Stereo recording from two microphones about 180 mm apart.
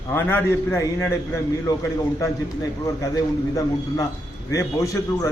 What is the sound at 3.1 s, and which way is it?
A man's voice, 20° left (ahead or behind).